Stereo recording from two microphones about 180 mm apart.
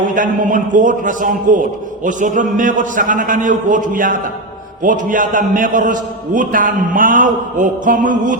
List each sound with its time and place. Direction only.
0.1 s a man's voice: 45° right (ahead or behind)